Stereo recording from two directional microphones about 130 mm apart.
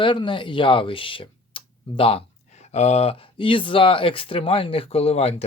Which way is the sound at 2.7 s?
55° left (ahead or behind).